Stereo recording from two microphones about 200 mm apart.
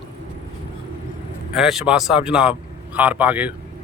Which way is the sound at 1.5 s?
Centre (ahead or behind).